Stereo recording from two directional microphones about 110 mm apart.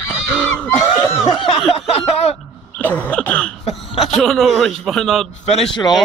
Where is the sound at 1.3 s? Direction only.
50° left (ahead or behind).